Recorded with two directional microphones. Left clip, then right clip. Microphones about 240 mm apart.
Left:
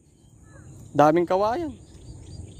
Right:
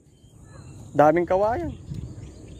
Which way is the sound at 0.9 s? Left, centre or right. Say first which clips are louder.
Right 1 dB; left.